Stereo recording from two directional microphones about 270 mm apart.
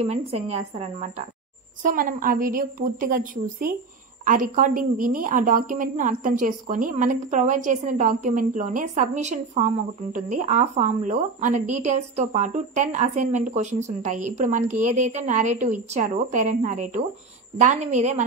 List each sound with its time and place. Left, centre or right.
0.0 s a woman's voice: right